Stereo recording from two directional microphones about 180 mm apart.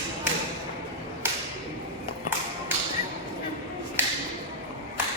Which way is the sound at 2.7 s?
10° right (ahead or behind).